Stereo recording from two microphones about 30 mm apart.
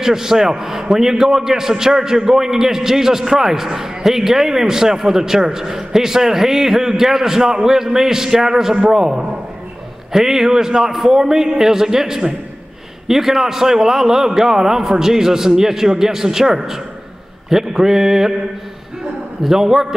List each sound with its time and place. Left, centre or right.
0.0 s a man's voice: centre
19.4 s a man's voice: centre